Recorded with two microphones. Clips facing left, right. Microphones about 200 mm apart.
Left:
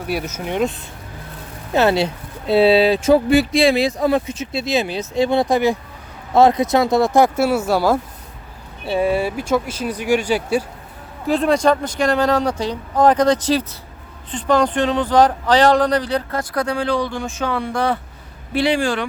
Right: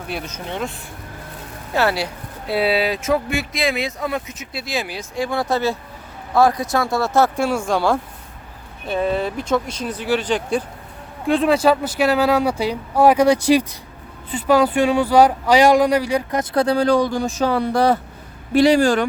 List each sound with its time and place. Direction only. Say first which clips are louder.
0.1 s speech: left 5 dB; 10° left (ahead or behind)
11.3 s speech: even; centre (ahead or behind)
16.4 s speech: right 4 dB; 25° right (ahead or behind); by 19.0 s 40° right (ahead or behind)